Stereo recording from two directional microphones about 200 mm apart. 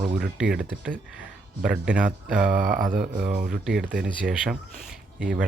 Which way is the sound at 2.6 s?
45° right (ahead or behind).